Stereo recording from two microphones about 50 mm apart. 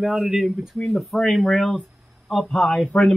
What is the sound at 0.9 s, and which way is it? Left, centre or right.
Speech, centre.